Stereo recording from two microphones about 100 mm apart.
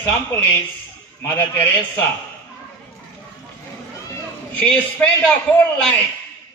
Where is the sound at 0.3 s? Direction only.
25° left (ahead or behind).